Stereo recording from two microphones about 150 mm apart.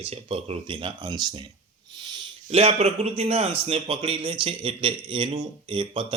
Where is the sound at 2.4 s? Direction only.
45° right (ahead or behind).